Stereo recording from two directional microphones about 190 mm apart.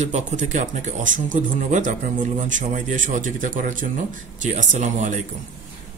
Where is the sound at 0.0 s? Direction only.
40° right (ahead or behind).